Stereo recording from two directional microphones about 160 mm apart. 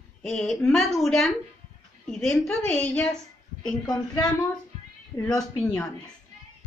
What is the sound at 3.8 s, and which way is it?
A woman's voice, 25° left (ahead or behind).